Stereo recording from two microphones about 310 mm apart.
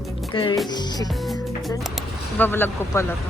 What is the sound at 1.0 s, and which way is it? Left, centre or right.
Music, centre.